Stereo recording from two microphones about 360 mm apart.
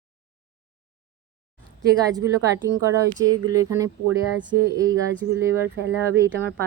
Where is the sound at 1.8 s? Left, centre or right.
Centre.